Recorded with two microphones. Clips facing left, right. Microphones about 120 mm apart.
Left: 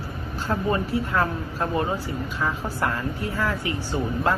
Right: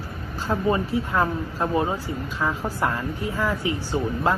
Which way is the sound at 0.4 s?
20° right (ahead or behind).